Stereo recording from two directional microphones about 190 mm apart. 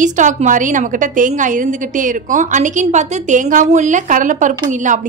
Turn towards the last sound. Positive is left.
turn(degrees=-40)  # may be behind; listen again after turning